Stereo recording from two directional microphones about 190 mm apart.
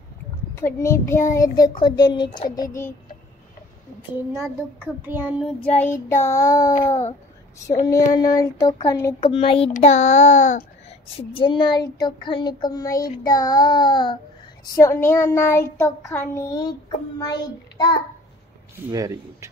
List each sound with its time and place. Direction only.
0.6 s child singing: 15° left (ahead or behind)
1.4 s a child's voice: 20° left (ahead or behind)
4.1 s speech: 15° right (ahead or behind)
6.0 s child singing: 15° left (ahead or behind)
7.8 s a child's voice: 20° left (ahead or behind)
9.3 s a child's voice: 30° left (ahead or behind)
14.8 s child singing: 15° left (ahead or behind)
17.2 s a child's voice: 20° left (ahead or behind)
18.9 s speech: 15° right (ahead or behind)